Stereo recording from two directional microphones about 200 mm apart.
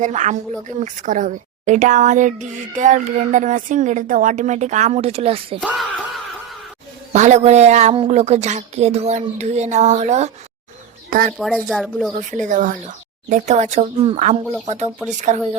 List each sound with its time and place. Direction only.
0.0 s a woman's voice: 40° right (ahead or behind)
5.5 s speech: centre (ahead or behind)
7.1 s a woman's voice: 35° right (ahead or behind)
11.3 s speech: centre (ahead or behind)
12.3 s a woman's voice: 40° right (ahead or behind)